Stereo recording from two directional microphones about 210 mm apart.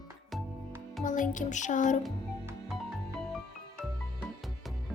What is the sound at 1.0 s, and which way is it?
Music, 40° left (ahead or behind).